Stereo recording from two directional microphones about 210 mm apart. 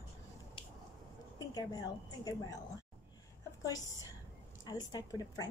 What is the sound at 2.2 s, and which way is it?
Speech, 15° left (ahead or behind).